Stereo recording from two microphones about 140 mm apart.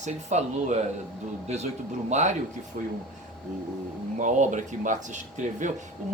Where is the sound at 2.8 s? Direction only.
70° right (ahead or behind).